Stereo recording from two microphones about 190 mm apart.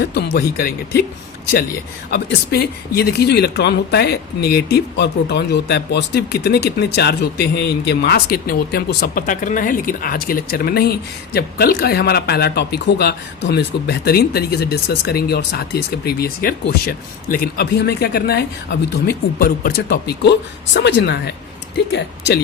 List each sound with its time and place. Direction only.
0.0 s speech: 60° left (ahead or behind)
2.1 s speech: 55° left (ahead or behind)